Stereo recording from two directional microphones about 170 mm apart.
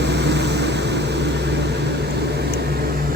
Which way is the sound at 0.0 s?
85° right.